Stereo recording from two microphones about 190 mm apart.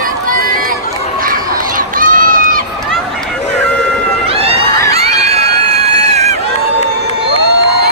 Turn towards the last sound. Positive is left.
turn(degrees=-35)  # may be behind; listen again after turning